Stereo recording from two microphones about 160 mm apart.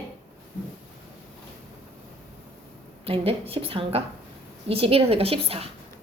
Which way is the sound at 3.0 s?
35° right (ahead or behind).